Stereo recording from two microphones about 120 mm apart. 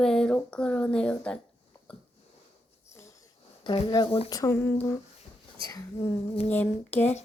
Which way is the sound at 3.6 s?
40° left (ahead or behind).